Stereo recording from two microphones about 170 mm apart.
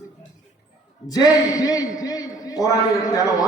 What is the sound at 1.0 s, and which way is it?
A man's voice, 20° left (ahead or behind).